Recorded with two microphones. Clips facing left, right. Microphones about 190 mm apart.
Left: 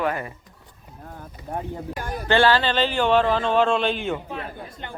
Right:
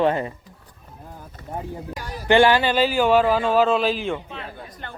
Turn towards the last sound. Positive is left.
turn(degrees=20)  # may be behind; listen again after turning